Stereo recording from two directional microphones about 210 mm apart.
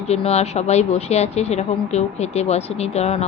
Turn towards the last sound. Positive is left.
turn(degrees=30)  # may be behind; listen again after turning